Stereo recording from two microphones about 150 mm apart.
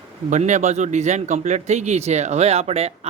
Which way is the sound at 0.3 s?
55° right (ahead or behind).